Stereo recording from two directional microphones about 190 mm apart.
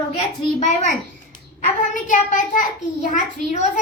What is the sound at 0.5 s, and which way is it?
Speech, 40° left (ahead or behind).